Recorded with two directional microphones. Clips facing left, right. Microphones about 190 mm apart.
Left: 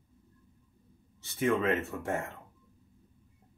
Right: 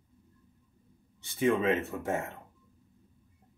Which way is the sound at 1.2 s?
Centre (ahead or behind).